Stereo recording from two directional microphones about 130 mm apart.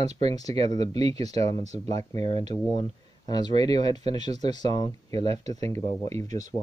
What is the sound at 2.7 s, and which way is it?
Speech, 35° left (ahead or behind).